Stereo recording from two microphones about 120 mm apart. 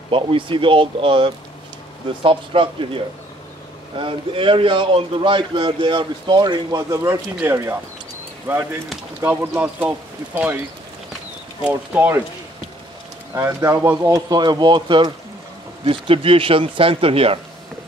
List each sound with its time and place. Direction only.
0.1 s a man's voice: 45° right (ahead or behind); by 10.6 s 15° right (ahead or behind)
11.6 s speech: 15° right (ahead or behind)
13.3 s speech: 25° right (ahead or behind)
15.8 s a man's voice: 50° right (ahead or behind)